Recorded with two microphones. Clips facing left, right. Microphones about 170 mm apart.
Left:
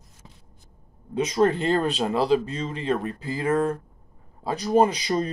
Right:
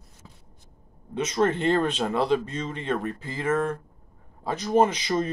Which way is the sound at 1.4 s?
10° left (ahead or behind).